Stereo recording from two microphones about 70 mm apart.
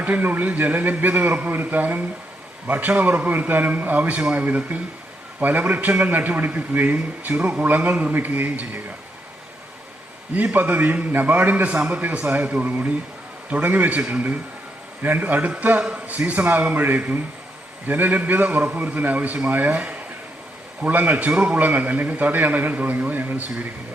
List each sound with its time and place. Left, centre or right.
0.0 s a man's voice: right
10.3 s a man's voice: right
16.1 s a man's voice: right